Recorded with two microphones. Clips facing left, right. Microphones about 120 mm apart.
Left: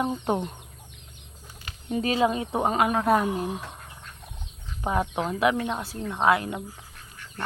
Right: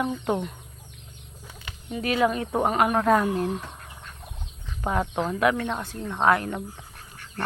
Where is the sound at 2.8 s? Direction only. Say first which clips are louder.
Right 2 dB; 40° right (ahead or behind).